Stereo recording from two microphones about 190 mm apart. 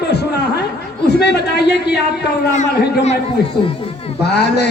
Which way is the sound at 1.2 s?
60° left (ahead or behind).